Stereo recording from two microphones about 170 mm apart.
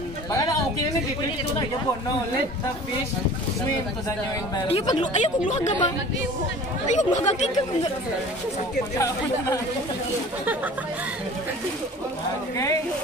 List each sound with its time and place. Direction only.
4.7 s speech: 35° left (ahead or behind)
5.6 s speech: 20° left (ahead or behind)
6.9 s speech: 45° left (ahead or behind)
8.9 s speech: 20° left (ahead or behind)
10.4 s speech: 10° right (ahead or behind)